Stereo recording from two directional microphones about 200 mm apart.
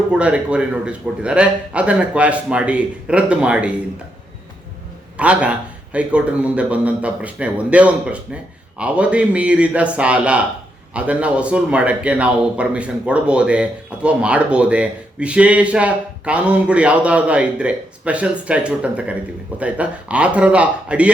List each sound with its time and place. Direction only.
0.1 s speech: 5° right (ahead or behind)
5.1 s a man's voice: 5° right (ahead or behind)